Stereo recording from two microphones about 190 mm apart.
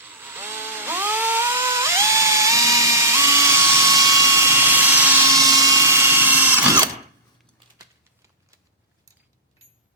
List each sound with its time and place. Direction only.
0.0 s chainsaw: 10° right (ahead or behind)
7.8 s typewriter: 15° right (ahead or behind)